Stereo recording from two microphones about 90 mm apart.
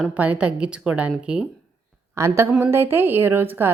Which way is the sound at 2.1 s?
30° right (ahead or behind).